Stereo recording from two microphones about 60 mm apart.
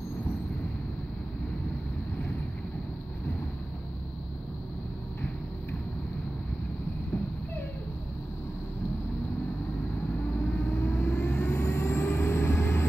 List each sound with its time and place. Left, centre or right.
10.4 s vehicle: left
11.5 s vehicle: left